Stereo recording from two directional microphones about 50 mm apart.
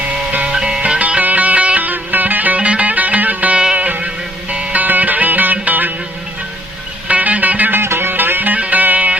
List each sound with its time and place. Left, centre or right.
0.3 s music: right
0.5 s music: centre
0.8 s music: right
7.1 s music: right
7.8 s music: right